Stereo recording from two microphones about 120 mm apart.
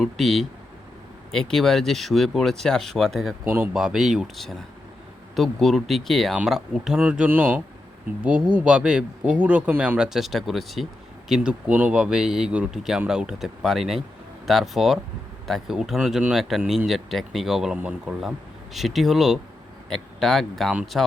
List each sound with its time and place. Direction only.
0.0 s speech: centre (ahead or behind)
3.4 s speech: 15° right (ahead or behind)
3.8 s speech: 5° right (ahead or behind)